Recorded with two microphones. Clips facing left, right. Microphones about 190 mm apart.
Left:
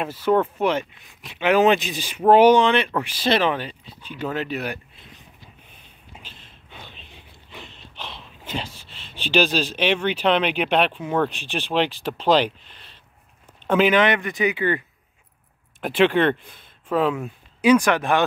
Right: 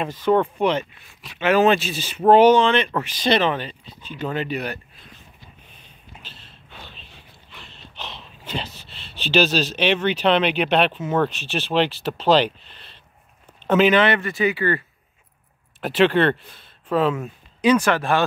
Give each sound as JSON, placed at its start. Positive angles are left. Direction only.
{"t": 0.0, "sound": "speech", "side_deg": 5}
{"t": 6.4, "sound": "a sound", "side_deg": 15}
{"t": 8.0, "sound": "speech", "side_deg": 10}
{"t": 11.0, "sound": "speech", "side_deg": -5}
{"t": 11.2, "sound": "speech", "side_deg": 15}
{"t": 15.8, "sound": "speech", "side_deg": 10}